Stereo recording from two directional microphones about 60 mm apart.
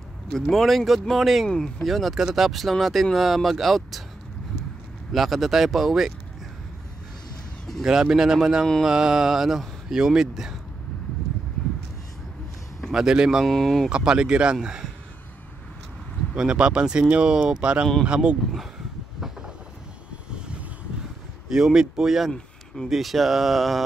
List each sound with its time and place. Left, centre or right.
0.3 s speech: centre
5.1 s speech: centre
7.8 s speech: centre
12.8 s speech: centre
13.5 s speech: centre
13.8 s speech: centre
16.3 s speech: centre
19.1 s train: centre
21.5 s speech: centre